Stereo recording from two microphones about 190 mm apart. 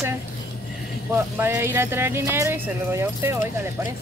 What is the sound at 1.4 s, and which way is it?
Speech, 10° right (ahead or behind).